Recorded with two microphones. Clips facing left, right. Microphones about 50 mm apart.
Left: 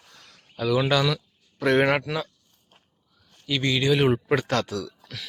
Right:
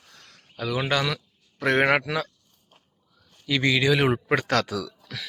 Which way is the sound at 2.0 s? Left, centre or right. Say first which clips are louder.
Right 1 dB; right.